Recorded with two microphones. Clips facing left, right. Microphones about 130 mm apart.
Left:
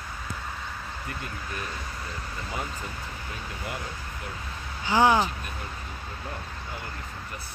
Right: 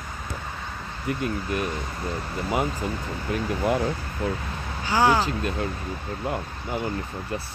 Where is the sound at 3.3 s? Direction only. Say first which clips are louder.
Right 14 dB; 85° right.